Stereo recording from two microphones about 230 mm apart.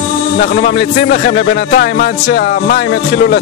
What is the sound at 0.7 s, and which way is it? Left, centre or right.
A man's voice, left.